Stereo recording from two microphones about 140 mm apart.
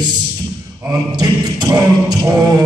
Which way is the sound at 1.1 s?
30° right (ahead or behind).